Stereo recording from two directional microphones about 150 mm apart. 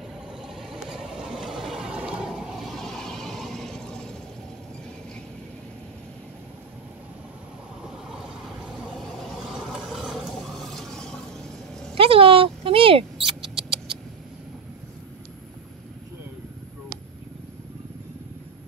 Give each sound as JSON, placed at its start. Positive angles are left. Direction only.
{"t": 0.6, "sound": "vehicle", "side_deg": 0}
{"t": 8.9, "sound": "vehicle", "side_deg": 0}
{"t": 11.9, "sound": "rodents", "side_deg": -40}